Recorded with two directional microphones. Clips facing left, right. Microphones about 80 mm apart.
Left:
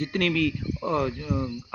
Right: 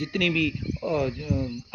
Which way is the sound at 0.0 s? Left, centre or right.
Left.